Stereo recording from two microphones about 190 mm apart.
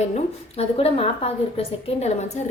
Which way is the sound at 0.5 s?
30° left (ahead or behind).